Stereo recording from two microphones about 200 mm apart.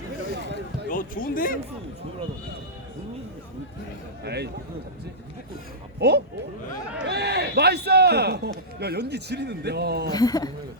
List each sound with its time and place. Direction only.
0.9 s speech: 45° left (ahead or behind)
4.2 s a man's voice: 55° right (ahead or behind)
6.0 s a man's voice: 55° right (ahead or behind)
10.1 s speech: 20° left (ahead or behind)